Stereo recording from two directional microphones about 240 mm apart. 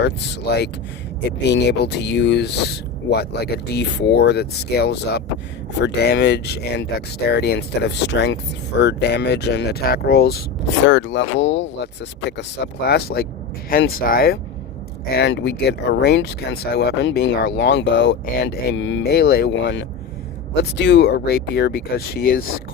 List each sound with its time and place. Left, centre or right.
0.0 s speech: left